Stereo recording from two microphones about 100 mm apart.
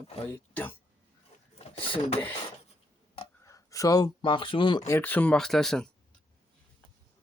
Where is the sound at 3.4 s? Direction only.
35° left (ahead or behind).